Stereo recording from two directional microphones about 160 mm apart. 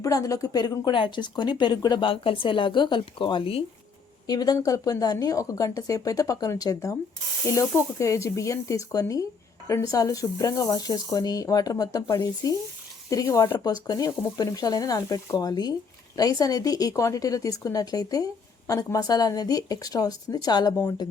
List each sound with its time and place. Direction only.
0.0 s a woman's voice: 20° left (ahead or behind)